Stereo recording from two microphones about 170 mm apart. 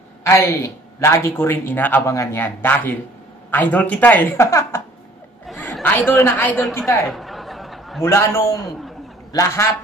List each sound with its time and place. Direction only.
0.2 s a woman's voice: 15° left (ahead or behind)
7.1 s a sound: centre (ahead or behind)
8.0 s speech: 15° left (ahead or behind)